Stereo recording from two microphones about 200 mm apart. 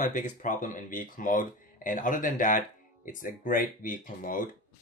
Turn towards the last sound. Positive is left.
turn(degrees=40)  # may be behind; listen again after turning